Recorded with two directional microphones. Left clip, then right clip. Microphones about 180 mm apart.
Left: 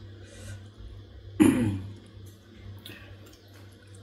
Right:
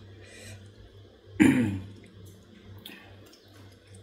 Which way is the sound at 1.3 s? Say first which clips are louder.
Even; 25° right (ahead or behind).